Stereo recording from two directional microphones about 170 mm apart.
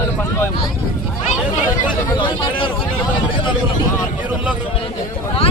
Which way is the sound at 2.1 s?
30° left (ahead or behind).